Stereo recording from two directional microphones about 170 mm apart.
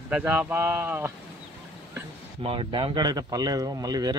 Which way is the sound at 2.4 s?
30° right (ahead or behind).